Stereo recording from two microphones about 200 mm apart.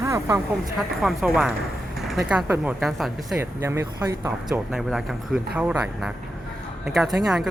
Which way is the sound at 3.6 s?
15° right (ahead or behind).